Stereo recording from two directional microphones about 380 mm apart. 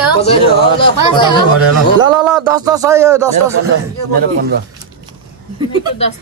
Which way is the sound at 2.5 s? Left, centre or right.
Centre.